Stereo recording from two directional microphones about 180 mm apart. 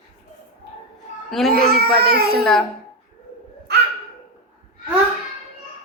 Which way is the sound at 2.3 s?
Centre (ahead or behind).